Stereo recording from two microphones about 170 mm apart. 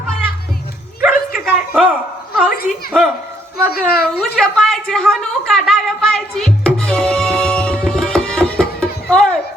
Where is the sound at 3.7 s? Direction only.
65° left (ahead or behind).